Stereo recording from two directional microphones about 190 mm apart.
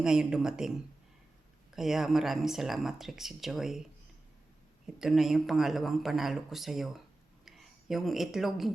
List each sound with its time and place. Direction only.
0.0 s speech: 5° right (ahead or behind)
1.7 s speech: centre (ahead or behind)
4.9 s speech: centre (ahead or behind)